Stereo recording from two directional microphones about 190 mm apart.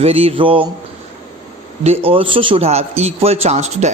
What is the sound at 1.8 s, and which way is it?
A man's voice, 30° right (ahead or behind).